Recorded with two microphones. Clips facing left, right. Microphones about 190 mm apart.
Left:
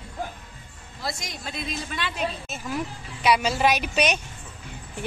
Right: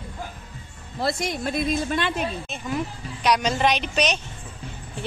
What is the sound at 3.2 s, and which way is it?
A woman's voice, 5° left (ahead or behind).